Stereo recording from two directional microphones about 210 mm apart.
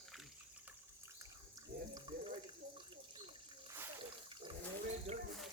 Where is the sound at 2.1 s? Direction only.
20° right (ahead or behind).